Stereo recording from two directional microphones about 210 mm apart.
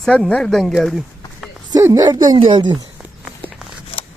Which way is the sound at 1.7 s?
15° right (ahead or behind).